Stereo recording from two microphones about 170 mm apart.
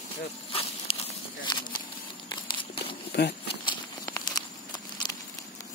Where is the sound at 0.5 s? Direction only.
35° left (ahead or behind).